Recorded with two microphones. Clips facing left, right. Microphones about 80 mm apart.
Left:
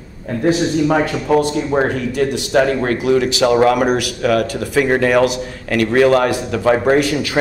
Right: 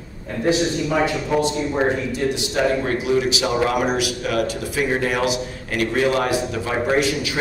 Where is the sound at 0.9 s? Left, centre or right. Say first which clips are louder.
Left 5 dB; left.